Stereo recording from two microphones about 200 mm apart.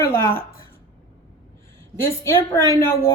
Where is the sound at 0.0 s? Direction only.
15° left (ahead or behind).